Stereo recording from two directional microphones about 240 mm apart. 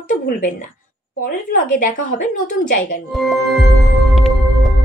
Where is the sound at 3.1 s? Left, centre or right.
Centre.